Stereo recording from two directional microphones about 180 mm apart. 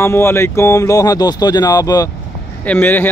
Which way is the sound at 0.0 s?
15° left (ahead or behind).